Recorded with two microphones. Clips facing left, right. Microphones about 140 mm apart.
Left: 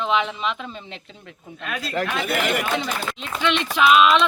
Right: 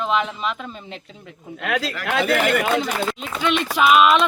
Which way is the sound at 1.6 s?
90° right.